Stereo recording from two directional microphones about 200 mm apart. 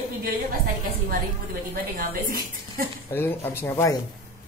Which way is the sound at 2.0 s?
45° right (ahead or behind).